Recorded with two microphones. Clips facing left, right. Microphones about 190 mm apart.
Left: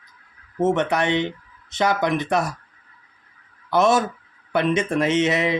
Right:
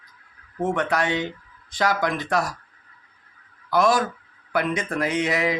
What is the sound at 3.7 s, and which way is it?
Speech, 25° left (ahead or behind).